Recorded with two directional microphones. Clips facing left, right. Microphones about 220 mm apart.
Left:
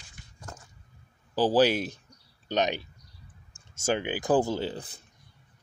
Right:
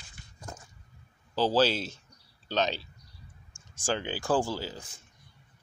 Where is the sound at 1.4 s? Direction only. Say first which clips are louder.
Left 3 dB; 15° left (ahead or behind).